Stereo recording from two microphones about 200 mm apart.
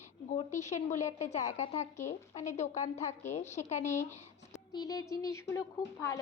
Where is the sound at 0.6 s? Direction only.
35° left (ahead or behind).